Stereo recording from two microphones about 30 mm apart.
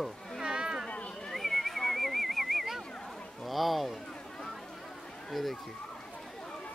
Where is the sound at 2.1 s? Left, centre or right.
Centre.